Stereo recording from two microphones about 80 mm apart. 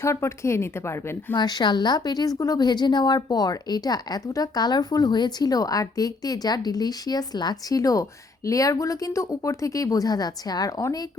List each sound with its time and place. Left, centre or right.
0.0 s a woman's voice: left
1.4 s a woman's voice: left